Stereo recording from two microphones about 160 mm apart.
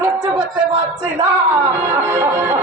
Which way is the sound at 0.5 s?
25° right (ahead or behind).